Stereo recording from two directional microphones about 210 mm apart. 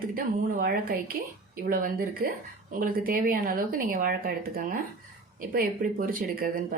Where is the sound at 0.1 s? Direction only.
40° right (ahead or behind).